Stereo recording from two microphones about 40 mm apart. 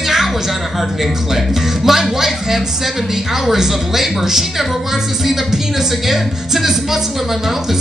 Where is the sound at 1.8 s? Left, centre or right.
Centre.